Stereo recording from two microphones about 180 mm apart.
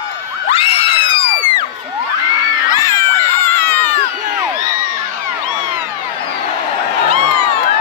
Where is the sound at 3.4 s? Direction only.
10° left (ahead or behind).